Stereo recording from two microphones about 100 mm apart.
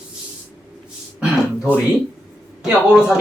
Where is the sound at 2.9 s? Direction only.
5° right (ahead or behind).